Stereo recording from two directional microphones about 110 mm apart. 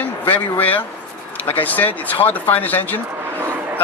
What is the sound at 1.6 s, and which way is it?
Speech, 15° left (ahead or behind).